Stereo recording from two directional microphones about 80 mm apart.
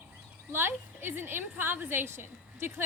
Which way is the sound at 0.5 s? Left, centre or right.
Right.